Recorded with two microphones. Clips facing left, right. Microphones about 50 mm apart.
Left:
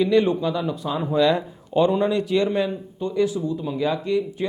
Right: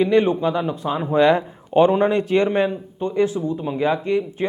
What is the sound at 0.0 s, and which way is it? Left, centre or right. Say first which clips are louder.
Speech: right 2 dB; right.